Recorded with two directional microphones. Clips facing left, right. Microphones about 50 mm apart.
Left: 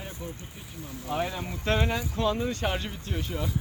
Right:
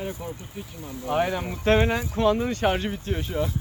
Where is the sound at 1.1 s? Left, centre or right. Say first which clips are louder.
Right 6 dB; right.